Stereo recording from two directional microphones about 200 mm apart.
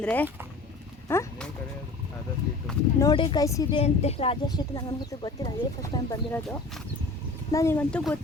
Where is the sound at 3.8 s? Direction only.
30° left (ahead or behind).